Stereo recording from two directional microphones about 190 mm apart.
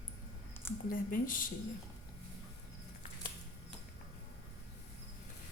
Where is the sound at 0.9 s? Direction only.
45° left (ahead or behind).